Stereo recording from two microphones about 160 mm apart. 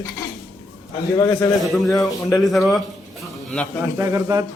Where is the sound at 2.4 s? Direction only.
Centre (ahead or behind).